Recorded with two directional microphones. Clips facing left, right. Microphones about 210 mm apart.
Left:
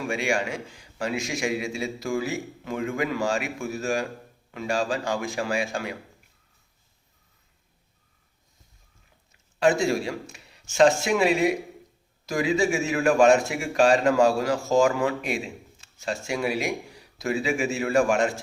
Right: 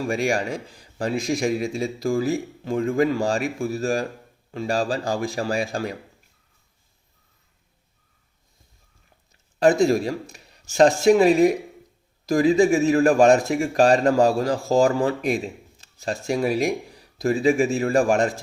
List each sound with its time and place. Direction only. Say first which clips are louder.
0.0 s a man's voice: right 3 dB; 35° right (ahead or behind)
9.3 s a man's voice: right 4 dB; 40° right (ahead or behind)